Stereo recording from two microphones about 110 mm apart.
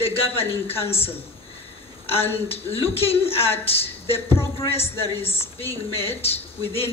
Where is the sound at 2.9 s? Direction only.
65° left (ahead or behind).